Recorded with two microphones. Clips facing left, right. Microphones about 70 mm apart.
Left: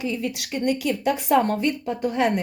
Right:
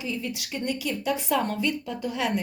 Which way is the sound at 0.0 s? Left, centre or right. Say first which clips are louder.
Left 5 dB; left.